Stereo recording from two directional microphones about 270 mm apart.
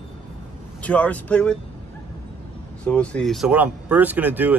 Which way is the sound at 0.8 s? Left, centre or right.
Centre.